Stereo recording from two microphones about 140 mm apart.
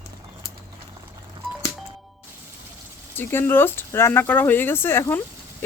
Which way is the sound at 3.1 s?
15° left (ahead or behind).